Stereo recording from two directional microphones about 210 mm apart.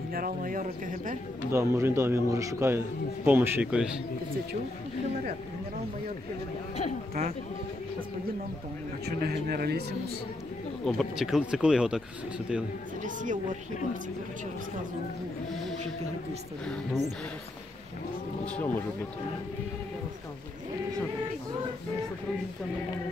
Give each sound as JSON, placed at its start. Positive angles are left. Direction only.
{"t": 0.1, "sound": "speech", "side_deg": -40}
{"t": 1.5, "sound": "a man's voice", "side_deg": -10}
{"t": 9.0, "sound": "speech", "side_deg": -45}
{"t": 10.9, "sound": "speech", "side_deg": 0}
{"t": 13.0, "sound": "speech", "side_deg": -35}
{"t": 16.6, "sound": "speech", "side_deg": 5}
{"t": 18.4, "sound": "speech", "side_deg": 5}